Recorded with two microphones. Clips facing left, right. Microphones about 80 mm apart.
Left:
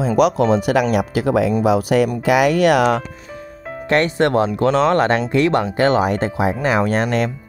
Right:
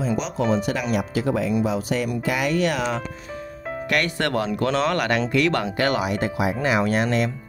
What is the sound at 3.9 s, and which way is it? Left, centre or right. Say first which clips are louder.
Speech: left 8 dB; left.